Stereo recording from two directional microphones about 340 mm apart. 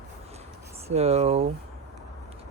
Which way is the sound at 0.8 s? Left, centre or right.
Centre.